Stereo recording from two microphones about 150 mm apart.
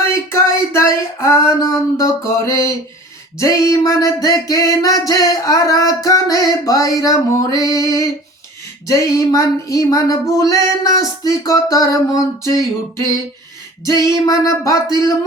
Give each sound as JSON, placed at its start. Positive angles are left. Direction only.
{"t": 0.1, "sound": "a sound", "side_deg": 20}
{"t": 3.3, "sound": "music", "side_deg": 20}
{"t": 13.8, "sound": "music", "side_deg": 20}